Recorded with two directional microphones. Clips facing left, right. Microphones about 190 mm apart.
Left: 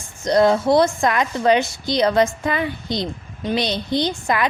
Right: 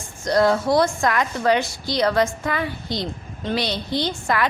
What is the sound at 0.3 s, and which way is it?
A woman's voice, 20° left (ahead or behind).